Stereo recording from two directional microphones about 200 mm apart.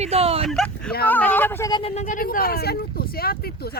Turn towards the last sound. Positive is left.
turn(degrees=50)  # may be behind; listen again after turning